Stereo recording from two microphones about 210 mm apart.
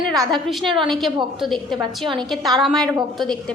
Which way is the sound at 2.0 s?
20° right (ahead or behind).